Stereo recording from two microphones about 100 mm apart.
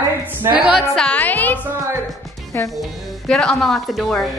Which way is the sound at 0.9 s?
10° left (ahead or behind).